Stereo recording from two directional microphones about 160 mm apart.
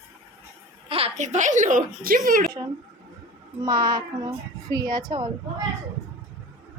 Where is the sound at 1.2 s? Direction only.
50° right (ahead or behind).